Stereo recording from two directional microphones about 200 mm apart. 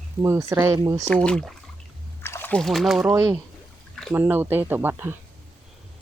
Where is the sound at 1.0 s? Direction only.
5° left (ahead or behind).